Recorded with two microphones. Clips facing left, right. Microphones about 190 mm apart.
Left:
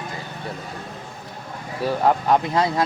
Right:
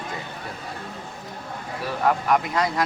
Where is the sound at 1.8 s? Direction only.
30° left (ahead or behind).